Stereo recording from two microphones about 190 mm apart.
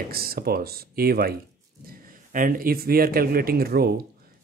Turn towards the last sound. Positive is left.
turn(degrees=-55)  # may be behind; listen again after turning